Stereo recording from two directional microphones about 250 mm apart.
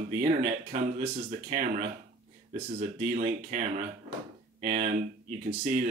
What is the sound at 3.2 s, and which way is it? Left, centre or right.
Speech, right.